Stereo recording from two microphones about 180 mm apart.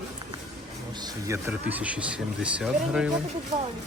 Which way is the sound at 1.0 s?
15° right (ahead or behind).